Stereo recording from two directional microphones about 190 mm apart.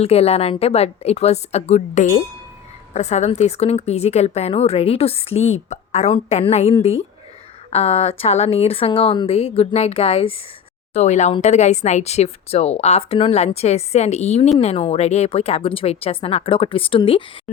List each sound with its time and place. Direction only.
0.0 s speech: 35° left (ahead or behind)